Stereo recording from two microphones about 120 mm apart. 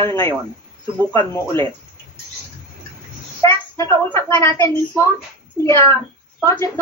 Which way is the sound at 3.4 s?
25° left (ahead or behind).